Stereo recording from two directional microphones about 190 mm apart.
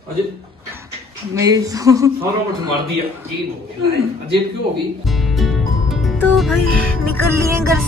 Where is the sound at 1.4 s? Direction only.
20° right (ahead or behind).